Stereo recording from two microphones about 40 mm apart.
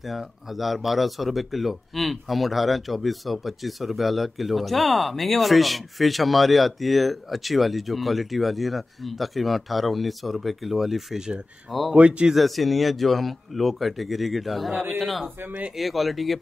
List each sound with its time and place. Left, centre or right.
0.0 s speech: centre
11.1 s speech: centre
11.9 s speech: right
12.4 s speech: centre
15.2 s speech: right
15.7 s speech: centre